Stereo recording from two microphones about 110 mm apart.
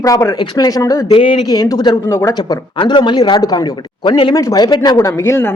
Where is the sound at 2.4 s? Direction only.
45° left (ahead or behind).